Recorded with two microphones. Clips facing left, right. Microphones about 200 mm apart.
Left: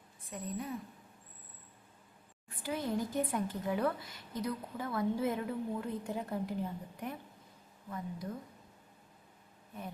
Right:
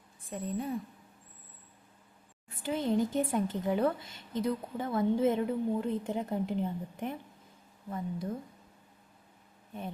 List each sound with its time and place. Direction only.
0.4 s a woman's voice: 30° right (ahead or behind)
2.6 s a woman's voice: 25° right (ahead or behind)